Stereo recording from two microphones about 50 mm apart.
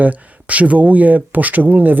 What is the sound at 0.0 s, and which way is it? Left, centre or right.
Speech, right.